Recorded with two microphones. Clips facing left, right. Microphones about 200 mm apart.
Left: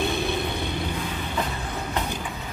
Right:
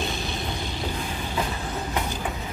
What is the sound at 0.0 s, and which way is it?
Vehicle, 60° left (ahead or behind).